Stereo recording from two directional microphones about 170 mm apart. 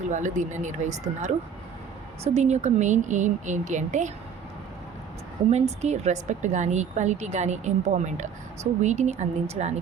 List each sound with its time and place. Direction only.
0.1 s a woman's voice: 45° right (ahead or behind)
5.5 s a woman's voice: 40° right (ahead or behind)